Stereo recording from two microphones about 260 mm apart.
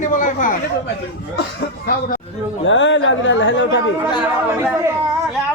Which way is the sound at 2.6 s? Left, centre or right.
Left.